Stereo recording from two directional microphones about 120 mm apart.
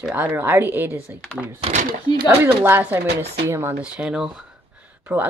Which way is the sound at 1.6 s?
80° right.